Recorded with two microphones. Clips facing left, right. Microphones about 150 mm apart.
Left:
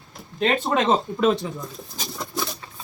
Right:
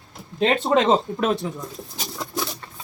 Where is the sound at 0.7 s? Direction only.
15° right (ahead or behind).